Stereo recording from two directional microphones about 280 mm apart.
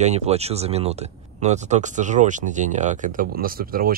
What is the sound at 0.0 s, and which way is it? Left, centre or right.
Speech, right.